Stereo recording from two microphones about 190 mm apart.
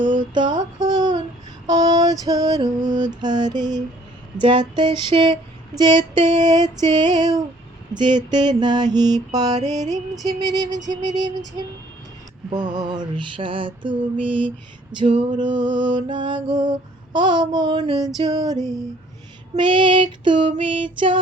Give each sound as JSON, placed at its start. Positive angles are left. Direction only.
{"t": 0.0, "sound": "a sound", "side_deg": -25}
{"t": 1.6, "sound": "mantra", "side_deg": -20}
{"t": 12.5, "sound": "mantra", "side_deg": -20}
{"t": 19.5, "sound": "mantra", "side_deg": -25}